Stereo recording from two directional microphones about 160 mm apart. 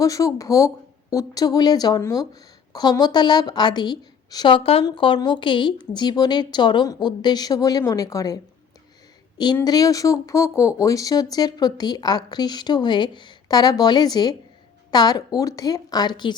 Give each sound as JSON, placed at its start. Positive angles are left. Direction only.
{"t": 0.0, "sound": "speech", "side_deg": 20}
{"t": 9.6, "sound": "speech", "side_deg": 20}